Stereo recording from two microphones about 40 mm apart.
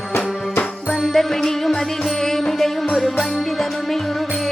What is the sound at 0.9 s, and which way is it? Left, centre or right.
Music, centre.